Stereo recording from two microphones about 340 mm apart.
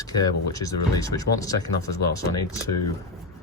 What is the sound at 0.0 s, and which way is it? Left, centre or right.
Speech, centre.